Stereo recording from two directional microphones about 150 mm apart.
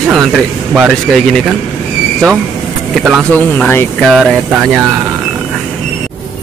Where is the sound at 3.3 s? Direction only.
10° left (ahead or behind).